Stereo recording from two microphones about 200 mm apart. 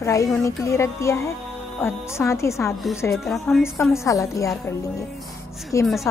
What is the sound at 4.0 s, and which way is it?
Speech, 15° left (ahead or behind).